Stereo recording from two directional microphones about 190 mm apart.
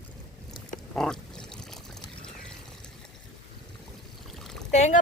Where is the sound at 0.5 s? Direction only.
5° left (ahead or behind).